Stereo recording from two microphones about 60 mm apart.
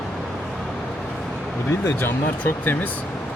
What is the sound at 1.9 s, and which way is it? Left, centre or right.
Speech, left.